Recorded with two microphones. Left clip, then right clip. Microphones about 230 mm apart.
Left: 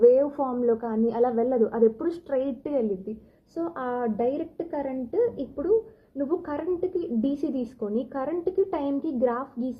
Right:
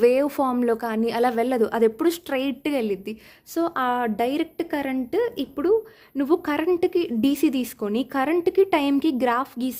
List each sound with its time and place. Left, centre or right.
0.0 s speech: right
3.8 s a woman's voice: right